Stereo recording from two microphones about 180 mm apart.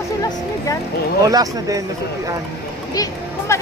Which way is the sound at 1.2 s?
20° right (ahead or behind).